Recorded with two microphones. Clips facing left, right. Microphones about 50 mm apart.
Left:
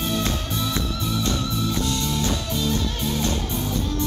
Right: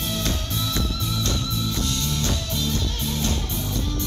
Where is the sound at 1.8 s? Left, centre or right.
Centre.